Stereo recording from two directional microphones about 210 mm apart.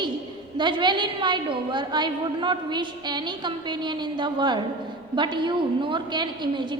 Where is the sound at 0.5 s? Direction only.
20° right (ahead or behind).